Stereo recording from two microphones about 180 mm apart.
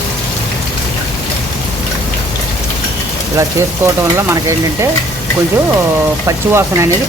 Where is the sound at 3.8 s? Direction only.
15° right (ahead or behind).